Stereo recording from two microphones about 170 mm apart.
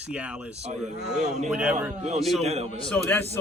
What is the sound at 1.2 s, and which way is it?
Speech, 40° right (ahead or behind).